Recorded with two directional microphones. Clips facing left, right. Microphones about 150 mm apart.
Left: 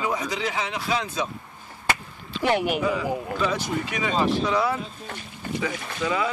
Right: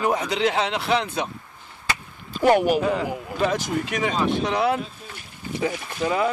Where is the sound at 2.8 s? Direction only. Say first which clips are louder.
Right 1 dB; 55° right (ahead or behind).